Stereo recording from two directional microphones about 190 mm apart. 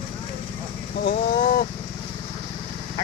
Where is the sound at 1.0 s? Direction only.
55° left (ahead or behind).